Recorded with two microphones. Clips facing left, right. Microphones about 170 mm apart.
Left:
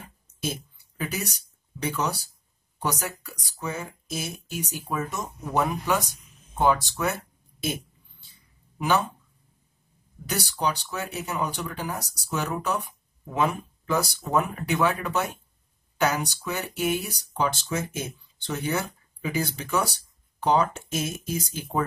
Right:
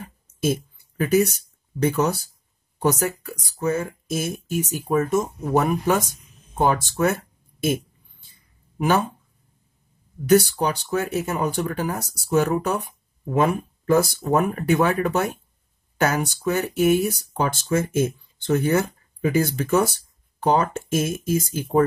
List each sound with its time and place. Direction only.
0.4 s speech: 50° right (ahead or behind)
7.6 s a sound: 50° right (ahead or behind)
10.2 s speech: 50° right (ahead or behind)